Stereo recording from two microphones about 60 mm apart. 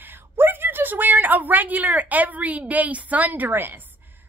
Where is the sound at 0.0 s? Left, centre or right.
Right.